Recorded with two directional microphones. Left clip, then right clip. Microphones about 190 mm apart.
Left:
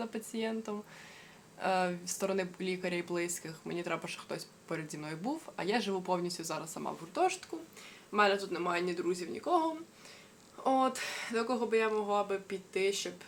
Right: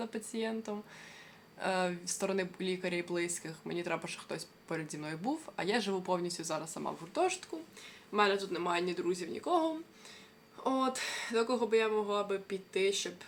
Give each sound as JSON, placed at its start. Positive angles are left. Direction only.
{"t": 0.0, "sound": "speech", "side_deg": 0}